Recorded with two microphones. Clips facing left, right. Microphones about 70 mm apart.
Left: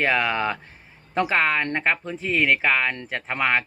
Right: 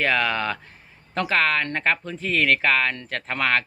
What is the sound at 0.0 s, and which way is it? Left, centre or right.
Speech, centre.